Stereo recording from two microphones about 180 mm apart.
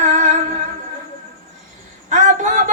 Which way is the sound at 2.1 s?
45° right (ahead or behind).